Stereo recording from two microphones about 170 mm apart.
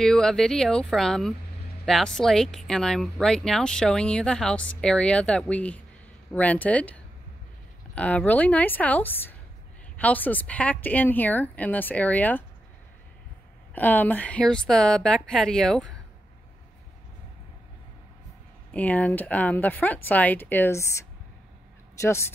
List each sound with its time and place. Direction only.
0.0 s a woman's voice: 5° left (ahead or behind)
13.7 s speech: 10° left (ahead or behind)
18.7 s a woman's voice: 10° left (ahead or behind)
22.0 s a woman's voice: 15° left (ahead or behind)